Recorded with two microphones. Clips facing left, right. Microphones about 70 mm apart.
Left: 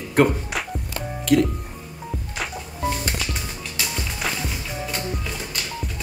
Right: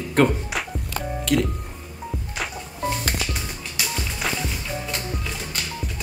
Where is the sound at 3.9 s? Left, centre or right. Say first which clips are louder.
Right 1 dB; centre.